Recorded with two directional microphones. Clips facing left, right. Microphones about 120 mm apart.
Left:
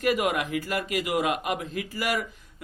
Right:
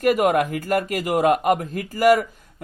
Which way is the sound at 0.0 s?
45° right (ahead or behind).